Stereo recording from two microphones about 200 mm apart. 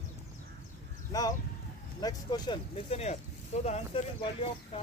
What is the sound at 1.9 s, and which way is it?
Speech, 20° left (ahead or behind).